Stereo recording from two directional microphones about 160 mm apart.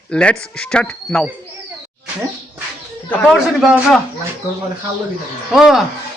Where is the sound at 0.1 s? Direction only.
5° left (ahead or behind).